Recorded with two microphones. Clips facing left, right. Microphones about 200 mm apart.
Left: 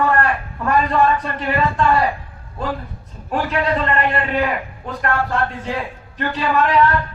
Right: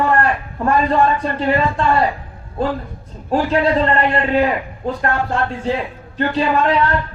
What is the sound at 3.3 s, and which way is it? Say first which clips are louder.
A man's voice: right 4 dB; 30° right (ahead or behind).